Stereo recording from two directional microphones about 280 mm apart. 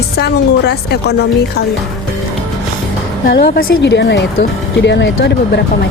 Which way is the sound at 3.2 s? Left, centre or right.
Left.